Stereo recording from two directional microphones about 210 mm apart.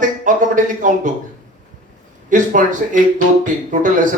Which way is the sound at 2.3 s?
40° right (ahead or behind).